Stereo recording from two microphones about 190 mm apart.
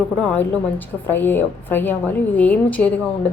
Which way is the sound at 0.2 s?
10° left (ahead or behind).